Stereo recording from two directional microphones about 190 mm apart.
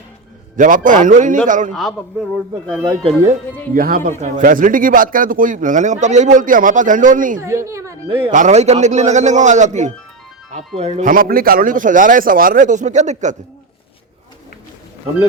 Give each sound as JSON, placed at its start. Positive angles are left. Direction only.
{"t": 0.5, "sound": "speech", "side_deg": -45}
{"t": 2.3, "sound": "speech", "side_deg": -5}
{"t": 2.8, "sound": "speech", "side_deg": -20}
{"t": 3.8, "sound": "speech", "side_deg": -50}
{"t": 7.3, "sound": "a woman's voice", "side_deg": -15}
{"t": 8.3, "sound": "a man's voice", "side_deg": -40}